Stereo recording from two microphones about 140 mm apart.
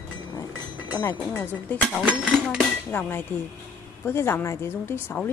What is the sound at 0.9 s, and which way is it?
Speech, 20° left (ahead or behind).